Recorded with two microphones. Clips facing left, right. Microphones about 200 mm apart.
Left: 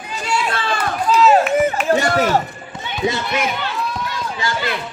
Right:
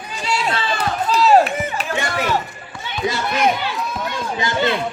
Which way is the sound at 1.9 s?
40° left (ahead or behind).